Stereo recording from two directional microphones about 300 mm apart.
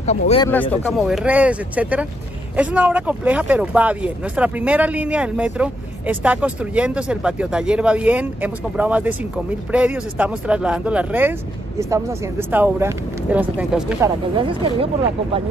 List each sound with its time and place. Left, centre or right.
0.0 s speech: left
0.5 s speech: centre
14.3 s speech: centre